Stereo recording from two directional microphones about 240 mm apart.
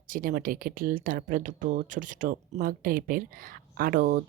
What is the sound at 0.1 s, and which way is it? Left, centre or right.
Speech, right.